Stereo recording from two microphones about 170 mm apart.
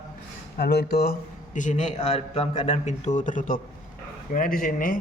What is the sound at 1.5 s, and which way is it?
A man's voice, 45° left (ahead or behind).